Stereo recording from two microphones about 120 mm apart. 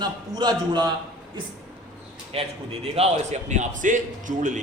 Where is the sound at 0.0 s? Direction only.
35° right (ahead or behind).